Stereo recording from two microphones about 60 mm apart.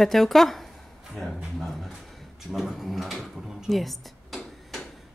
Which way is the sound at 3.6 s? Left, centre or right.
Centre.